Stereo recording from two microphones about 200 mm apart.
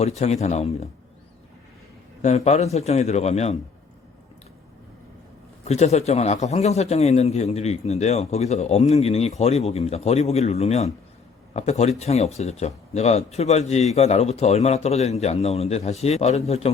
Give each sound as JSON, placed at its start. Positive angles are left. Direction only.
{"t": 0.0, "sound": "speech", "side_deg": 35}
{"t": 2.2, "sound": "speech", "side_deg": 35}
{"t": 5.6, "sound": "speech", "side_deg": 35}